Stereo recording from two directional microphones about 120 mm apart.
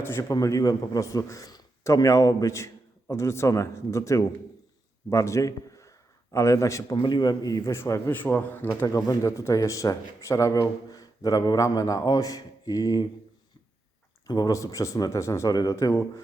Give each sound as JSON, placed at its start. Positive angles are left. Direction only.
{"t": 0.0, "sound": "a man's voice", "side_deg": 25}
{"t": 8.1, "sound": "speech", "side_deg": 15}
{"t": 14.3, "sound": "speech", "side_deg": 30}